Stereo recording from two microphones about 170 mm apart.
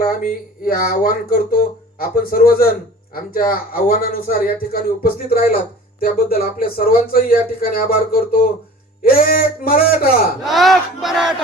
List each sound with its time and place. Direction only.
0.0 s speech: 55° left (ahead or behind)
10.4 s battle cry: centre (ahead or behind)